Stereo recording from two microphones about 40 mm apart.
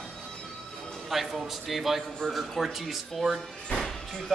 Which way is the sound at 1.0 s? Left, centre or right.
Centre.